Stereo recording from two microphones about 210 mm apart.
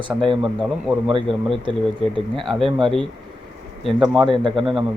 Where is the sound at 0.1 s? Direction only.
10° right (ahead or behind).